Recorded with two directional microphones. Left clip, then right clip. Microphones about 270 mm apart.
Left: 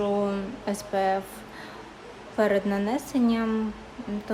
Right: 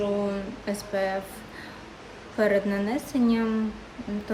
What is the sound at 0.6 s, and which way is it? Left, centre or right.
Speech, centre.